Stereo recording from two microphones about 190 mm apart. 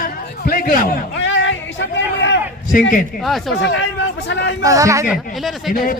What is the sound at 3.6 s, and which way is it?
Speech, 75° left (ahead or behind).